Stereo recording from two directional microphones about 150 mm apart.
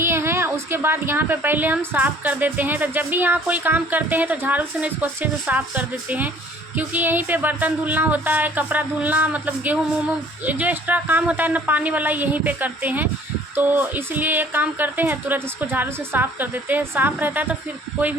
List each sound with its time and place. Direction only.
0.0 s a woman's voice: 15° right (ahead or behind)